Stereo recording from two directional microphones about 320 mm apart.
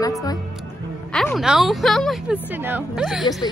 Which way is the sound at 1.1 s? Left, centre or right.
Centre.